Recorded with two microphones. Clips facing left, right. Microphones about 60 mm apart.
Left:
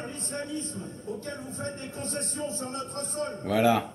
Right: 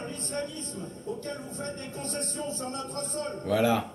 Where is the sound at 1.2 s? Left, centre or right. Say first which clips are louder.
Even; left.